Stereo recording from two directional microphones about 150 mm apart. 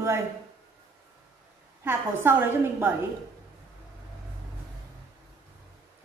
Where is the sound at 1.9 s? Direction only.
15° right (ahead or behind).